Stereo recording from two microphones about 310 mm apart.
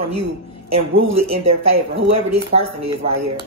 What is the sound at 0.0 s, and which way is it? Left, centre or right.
Speech, right.